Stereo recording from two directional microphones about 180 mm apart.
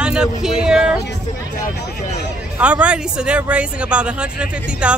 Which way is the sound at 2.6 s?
5° right (ahead or behind).